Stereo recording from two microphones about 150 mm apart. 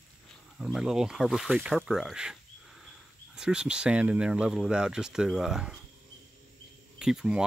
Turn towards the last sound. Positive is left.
turn(degrees=-5)  # may be behind; listen again after turning